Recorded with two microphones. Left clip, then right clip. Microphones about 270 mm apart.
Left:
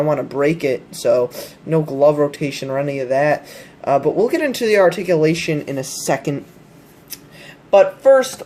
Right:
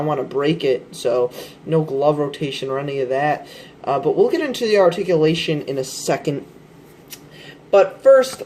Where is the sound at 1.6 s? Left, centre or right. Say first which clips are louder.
Left 3 dB; left.